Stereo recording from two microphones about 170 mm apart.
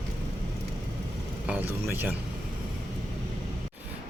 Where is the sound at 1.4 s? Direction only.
10° right (ahead or behind).